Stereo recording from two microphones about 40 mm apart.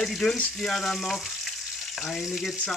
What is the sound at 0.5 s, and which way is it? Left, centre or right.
Frying, centre.